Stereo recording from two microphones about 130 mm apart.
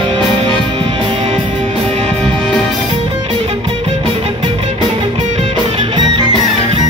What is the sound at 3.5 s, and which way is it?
Music, 45° right (ahead or behind).